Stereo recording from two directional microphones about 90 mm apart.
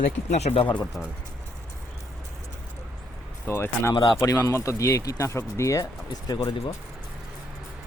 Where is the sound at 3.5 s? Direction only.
30° left (ahead or behind).